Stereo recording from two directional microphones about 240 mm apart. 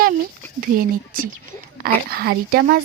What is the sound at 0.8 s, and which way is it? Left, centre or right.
Speech, right.